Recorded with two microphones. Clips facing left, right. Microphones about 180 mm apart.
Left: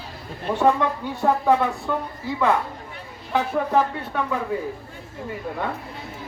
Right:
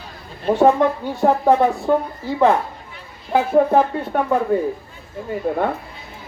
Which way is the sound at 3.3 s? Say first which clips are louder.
Right 7 dB; 50° right (ahead or behind).